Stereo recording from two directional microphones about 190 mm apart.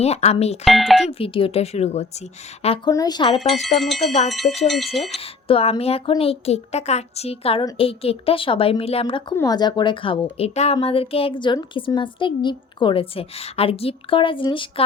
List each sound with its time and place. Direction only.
0.0 s a woman's voice: 35° left (ahead or behind)
0.6 s speech: centre (ahead or behind)
1.0 s a woman's voice: 30° left (ahead or behind)
2.9 s a woman's voice: 20° left (ahead or behind)
3.8 s speech: centre (ahead or behind)
4.4 s a woman's voice: 30° left (ahead or behind)
4.9 s speech: centre (ahead or behind)
5.2 s a woman's voice: 30° left (ahead or behind)